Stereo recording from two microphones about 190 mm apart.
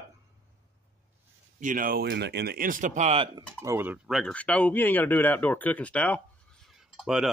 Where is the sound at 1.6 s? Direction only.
45° right (ahead or behind); by 3.4 s 30° right (ahead or behind).